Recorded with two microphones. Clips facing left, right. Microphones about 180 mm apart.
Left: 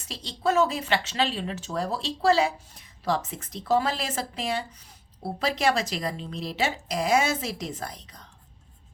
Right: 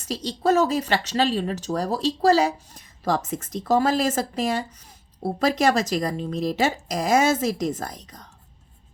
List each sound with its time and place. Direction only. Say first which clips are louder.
0.0 s a woman's voice: right 4 dB; 40° right (ahead or behind)